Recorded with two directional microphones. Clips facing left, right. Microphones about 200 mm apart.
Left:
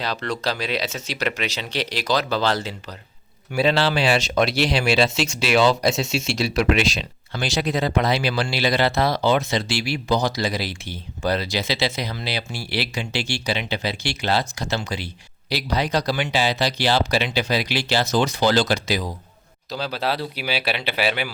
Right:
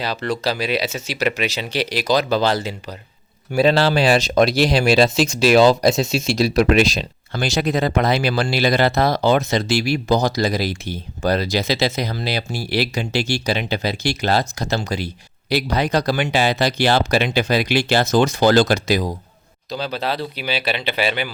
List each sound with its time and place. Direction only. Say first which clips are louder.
0.0 s speech: right 3 dB; 5° right (ahead or behind)
3.5 s speech: right 4 dB; 40° right (ahead or behind)
19.7 s speech: right 1 dB; 5° left (ahead or behind)